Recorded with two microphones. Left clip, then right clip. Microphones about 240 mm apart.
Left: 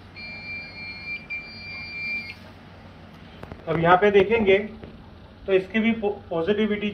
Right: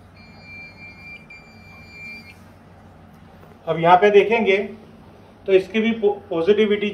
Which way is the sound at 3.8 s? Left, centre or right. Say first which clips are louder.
Right 4 dB; right.